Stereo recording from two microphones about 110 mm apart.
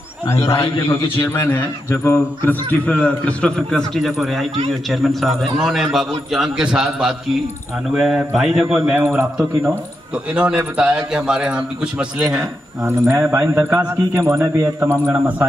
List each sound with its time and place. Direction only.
0.3 s a man's voice: 25° left (ahead or behind)
0.8 s a man's voice: 55° left (ahead or behind)
1.3 s a man's voice: 20° left (ahead or behind); by 9.0 s 10° right (ahead or behind)
10.3 s a man's voice: 10° right (ahead or behind)
13.1 s a man's voice: 20° right (ahead or behind)